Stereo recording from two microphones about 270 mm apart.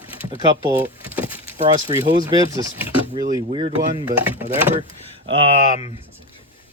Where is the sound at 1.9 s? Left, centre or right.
Centre.